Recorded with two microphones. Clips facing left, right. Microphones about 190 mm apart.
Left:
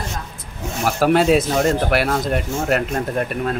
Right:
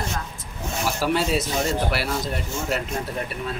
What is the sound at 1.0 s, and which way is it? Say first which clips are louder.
Speech: left 9 dB; 55° left (ahead or behind).